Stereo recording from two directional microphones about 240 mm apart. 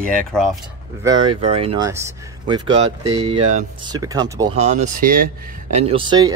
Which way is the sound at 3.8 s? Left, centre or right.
Centre.